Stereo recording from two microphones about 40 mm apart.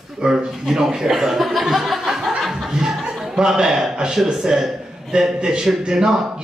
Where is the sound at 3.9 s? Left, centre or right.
Centre.